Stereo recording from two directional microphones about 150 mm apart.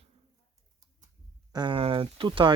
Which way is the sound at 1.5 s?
30° right (ahead or behind).